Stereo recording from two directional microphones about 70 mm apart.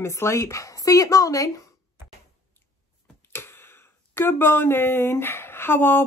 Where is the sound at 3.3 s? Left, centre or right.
Left.